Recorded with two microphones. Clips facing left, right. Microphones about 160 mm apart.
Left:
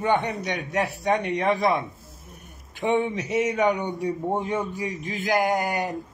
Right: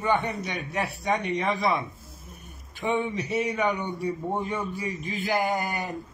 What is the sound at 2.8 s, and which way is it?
A man's voice, 15° left (ahead or behind).